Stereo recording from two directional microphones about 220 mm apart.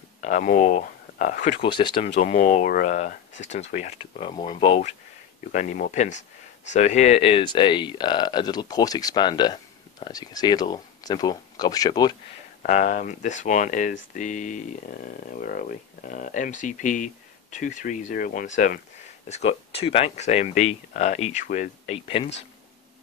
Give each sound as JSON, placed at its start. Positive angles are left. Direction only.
{"t": 0.2, "sound": "speech", "side_deg": 35}
{"t": 1.6, "sound": "speech", "side_deg": 20}
{"t": 5.5, "sound": "speech", "side_deg": 35}
{"t": 12.6, "sound": "speech", "side_deg": 35}